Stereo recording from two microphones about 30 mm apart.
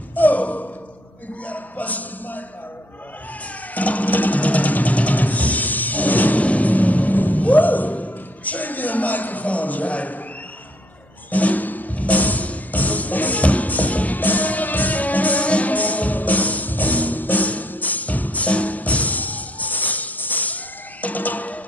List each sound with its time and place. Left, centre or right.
0.1 s sigh: left
1.4 s speech: left
3.7 s music: left
6.4 s music: left
11.2 s music: left
15.4 s music: left
15.7 s music: left